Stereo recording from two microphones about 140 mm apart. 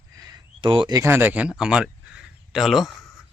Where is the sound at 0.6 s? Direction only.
35° right (ahead or behind).